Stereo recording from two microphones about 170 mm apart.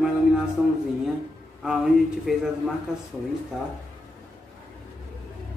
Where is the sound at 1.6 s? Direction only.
Centre (ahead or behind).